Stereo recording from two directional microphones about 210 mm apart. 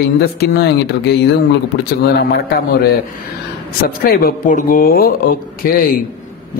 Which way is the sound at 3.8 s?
45° left (ahead or behind).